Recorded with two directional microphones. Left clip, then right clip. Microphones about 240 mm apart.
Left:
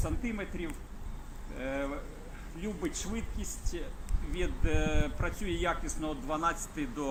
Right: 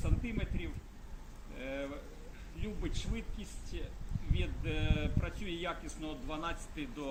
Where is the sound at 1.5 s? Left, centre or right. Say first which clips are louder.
Left 5 dB; centre.